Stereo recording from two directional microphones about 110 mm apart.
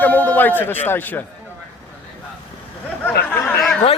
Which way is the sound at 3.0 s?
15° left (ahead or behind).